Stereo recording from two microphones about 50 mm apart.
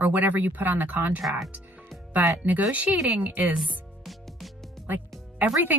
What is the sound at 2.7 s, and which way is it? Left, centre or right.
Speech, right.